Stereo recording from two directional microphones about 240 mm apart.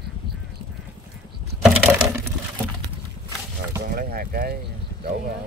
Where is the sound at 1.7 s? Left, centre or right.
Centre.